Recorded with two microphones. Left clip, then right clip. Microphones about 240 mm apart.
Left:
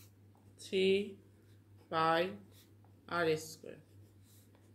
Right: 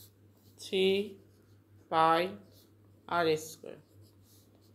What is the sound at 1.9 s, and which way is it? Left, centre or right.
A woman's voice, centre.